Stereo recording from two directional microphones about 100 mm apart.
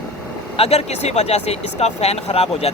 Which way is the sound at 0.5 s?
90° left.